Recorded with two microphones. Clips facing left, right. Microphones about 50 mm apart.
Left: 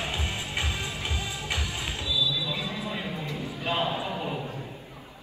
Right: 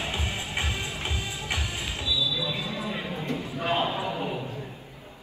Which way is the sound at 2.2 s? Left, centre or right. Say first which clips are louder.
Even; right.